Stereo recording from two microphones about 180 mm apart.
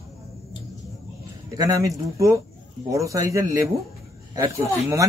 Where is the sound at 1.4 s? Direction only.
20° right (ahead or behind).